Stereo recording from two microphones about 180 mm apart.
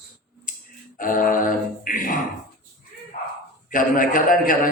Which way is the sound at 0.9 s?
50° left (ahead or behind).